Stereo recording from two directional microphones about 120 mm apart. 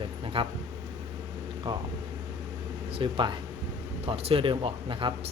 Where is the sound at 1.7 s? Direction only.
40° right (ahead or behind).